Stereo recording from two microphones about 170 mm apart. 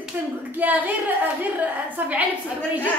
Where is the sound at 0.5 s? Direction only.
10° right (ahead or behind).